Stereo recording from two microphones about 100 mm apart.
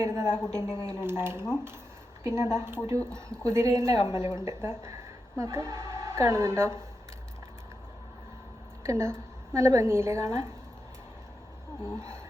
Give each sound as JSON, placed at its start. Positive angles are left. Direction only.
{"t": 0.0, "sound": "speech", "side_deg": -30}
{"t": 0.3, "sound": "speech", "side_deg": 10}
{"t": 0.6, "sound": "a woman's voice", "side_deg": 40}
{"t": 1.0, "sound": "speech", "side_deg": -25}
{"t": 3.9, "sound": "a woman's voice", "side_deg": 50}
{"t": 4.4, "sound": "speech", "side_deg": -30}
{"t": 8.8, "sound": "a woman's voice", "side_deg": -30}
{"t": 11.9, "sound": "speech", "side_deg": -30}